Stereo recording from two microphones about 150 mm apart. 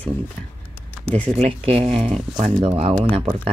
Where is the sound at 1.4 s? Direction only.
40° right (ahead or behind).